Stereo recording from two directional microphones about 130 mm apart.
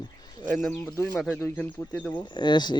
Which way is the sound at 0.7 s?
15° left (ahead or behind).